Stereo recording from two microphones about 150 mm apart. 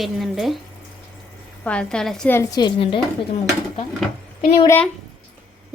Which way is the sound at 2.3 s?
20° left (ahead or behind).